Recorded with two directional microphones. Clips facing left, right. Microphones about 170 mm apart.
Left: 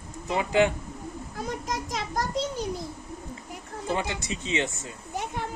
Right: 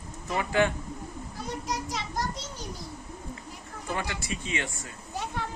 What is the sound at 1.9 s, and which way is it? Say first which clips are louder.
Children playing: left 3 dB; 45° left (ahead or behind).